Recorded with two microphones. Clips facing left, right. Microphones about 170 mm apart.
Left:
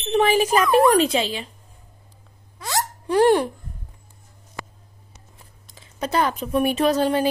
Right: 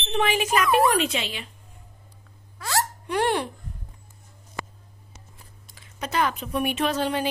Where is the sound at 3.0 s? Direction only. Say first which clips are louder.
Left 10 dB; 35° left (ahead or behind).